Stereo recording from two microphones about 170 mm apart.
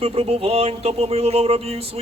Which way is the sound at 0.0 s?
35° right (ahead or behind).